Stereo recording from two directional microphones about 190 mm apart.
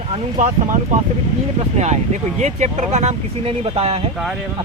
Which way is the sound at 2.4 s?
35° right (ahead or behind).